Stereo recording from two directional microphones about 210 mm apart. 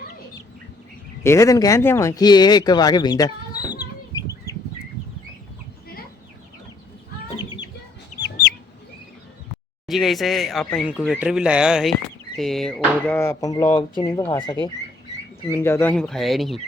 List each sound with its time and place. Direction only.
1.2 s speech: 15° left (ahead or behind)
3.6 s chicken: 20° left (ahead or behind)
7.3 s bird: 20° left (ahead or behind)
8.2 s chicken: 50° left (ahead or behind)
9.8 s speech: centre (ahead or behind)
13.1 s speech: 15° left (ahead or behind)